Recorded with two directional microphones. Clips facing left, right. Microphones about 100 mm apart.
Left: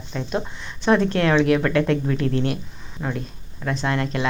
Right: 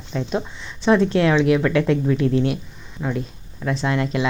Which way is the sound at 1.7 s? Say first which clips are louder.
Right 1 dB; 35° left (ahead or behind).